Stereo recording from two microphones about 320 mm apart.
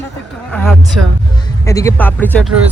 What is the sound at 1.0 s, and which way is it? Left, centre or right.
Speech, right.